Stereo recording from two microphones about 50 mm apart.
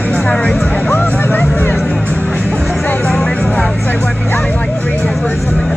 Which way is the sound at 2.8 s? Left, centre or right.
Left.